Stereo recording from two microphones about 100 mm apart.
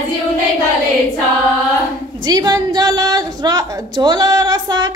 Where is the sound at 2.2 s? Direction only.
40° right (ahead or behind).